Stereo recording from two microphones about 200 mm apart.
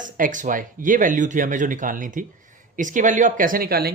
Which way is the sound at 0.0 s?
40° right (ahead or behind).